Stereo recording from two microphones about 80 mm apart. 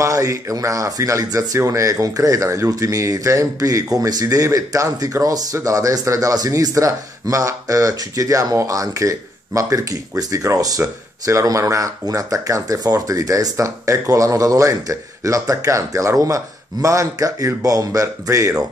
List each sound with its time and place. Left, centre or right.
0.0 s speech: right